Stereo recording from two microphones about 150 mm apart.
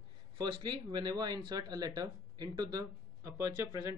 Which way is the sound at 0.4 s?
30° right (ahead or behind).